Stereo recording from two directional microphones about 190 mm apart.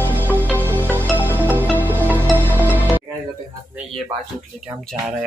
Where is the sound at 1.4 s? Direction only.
10° right (ahead or behind).